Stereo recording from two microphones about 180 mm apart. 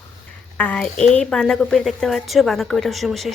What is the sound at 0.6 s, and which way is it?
A woman's voice, 5° left (ahead or behind).